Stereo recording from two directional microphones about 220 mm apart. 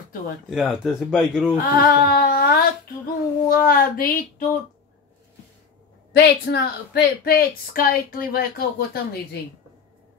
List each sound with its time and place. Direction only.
0.5 s speech: centre (ahead or behind)
1.6 s a sound: 40° left (ahead or behind)
3.4 s speech: 40° left (ahead or behind)
6.1 s a woman's voice: 50° left (ahead or behind)